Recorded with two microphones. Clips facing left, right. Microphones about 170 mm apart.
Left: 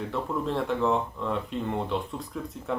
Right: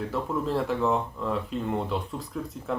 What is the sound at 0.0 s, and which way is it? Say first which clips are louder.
Speech: right 1 dB; centre (ahead or behind).